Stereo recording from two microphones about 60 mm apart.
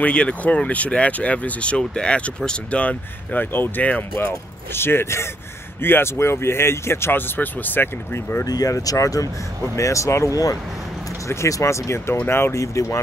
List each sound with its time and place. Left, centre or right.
0.0 s speech: left
4.3 s speech: left
8.5 s speech: left
9.8 s speech: left
12.3 s speech: left
12.5 s speech: left